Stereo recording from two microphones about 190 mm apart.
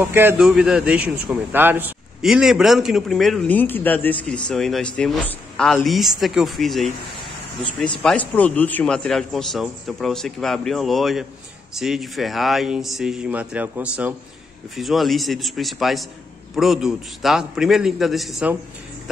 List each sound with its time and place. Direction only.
0.0 s a man's voice: 10° right (ahead or behind)